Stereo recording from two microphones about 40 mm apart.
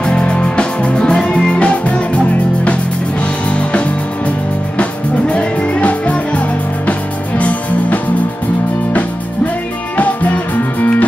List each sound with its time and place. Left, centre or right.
0.0 s music: left
3.4 s music: left
5.3 s music: left
9.9 s music: left